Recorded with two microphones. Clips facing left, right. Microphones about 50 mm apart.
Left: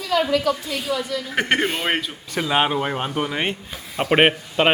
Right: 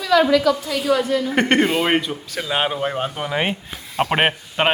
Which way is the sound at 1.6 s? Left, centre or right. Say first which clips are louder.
Right 5 dB; right.